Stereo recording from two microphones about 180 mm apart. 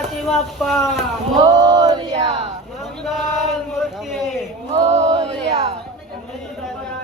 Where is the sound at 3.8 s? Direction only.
Centre (ahead or behind).